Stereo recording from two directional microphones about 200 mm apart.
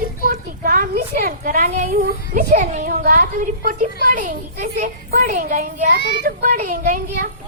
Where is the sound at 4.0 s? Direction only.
45° right (ahead or behind).